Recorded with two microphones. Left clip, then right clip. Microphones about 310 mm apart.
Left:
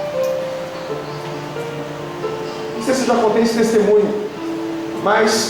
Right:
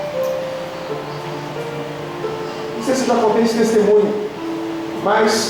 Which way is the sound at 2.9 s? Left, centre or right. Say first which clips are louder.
Even; centre.